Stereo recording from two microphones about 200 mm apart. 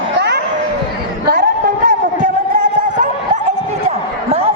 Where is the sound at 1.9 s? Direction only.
40° right (ahead or behind).